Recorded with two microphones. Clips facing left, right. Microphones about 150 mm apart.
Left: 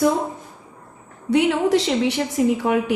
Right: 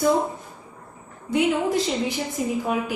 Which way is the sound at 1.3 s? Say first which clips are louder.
Left 4 dB; 70° left (ahead or behind).